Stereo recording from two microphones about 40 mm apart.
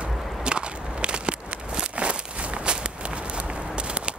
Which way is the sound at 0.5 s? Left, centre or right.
Right.